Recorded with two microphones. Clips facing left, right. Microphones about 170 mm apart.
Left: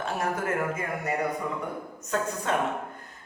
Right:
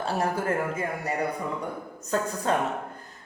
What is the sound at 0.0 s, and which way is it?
Speech, 30° right (ahead or behind).